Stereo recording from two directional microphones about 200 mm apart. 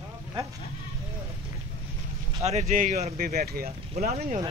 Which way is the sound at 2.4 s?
40° right (ahead or behind).